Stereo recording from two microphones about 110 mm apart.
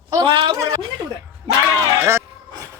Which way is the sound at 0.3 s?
50° right (ahead or behind).